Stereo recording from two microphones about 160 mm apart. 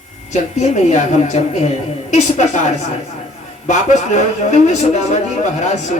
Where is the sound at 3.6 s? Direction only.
45° left (ahead or behind).